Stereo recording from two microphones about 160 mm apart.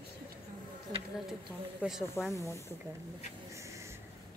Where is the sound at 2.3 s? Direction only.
20° left (ahead or behind).